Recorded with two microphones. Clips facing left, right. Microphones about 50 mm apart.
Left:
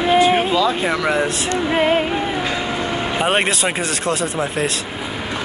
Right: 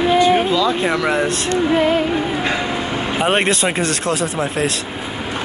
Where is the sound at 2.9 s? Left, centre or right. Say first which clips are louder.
Right 1 dB; centre.